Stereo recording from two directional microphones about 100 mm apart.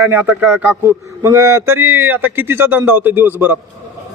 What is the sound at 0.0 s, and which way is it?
Speech, 20° right (ahead or behind).